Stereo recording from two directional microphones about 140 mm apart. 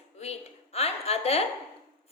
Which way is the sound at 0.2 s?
50° left (ahead or behind).